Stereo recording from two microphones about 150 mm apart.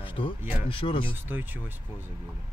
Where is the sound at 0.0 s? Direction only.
35° left (ahead or behind).